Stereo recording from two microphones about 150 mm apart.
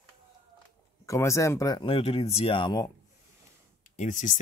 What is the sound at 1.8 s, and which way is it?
Speech, 40° left (ahead or behind).